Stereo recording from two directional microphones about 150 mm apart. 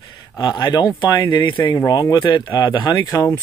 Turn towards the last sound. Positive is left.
turn(degrees=20)  # may be behind; listen again after turning